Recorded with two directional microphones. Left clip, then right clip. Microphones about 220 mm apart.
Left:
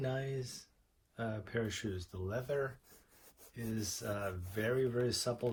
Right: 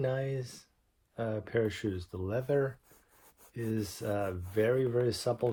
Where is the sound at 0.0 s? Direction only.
40° right (ahead or behind).